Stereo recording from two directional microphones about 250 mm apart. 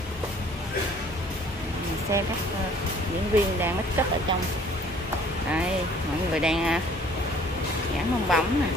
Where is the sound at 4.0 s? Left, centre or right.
Centre.